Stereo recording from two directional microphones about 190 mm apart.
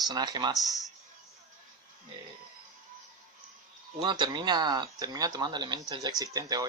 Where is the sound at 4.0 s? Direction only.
25° right (ahead or behind).